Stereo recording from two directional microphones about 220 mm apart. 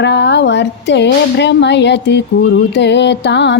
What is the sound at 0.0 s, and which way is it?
Music, 50° left (ahead or behind).